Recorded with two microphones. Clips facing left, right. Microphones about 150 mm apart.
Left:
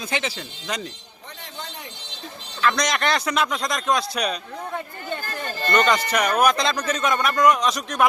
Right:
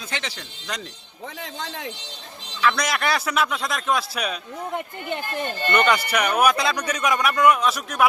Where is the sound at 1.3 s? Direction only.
90° right.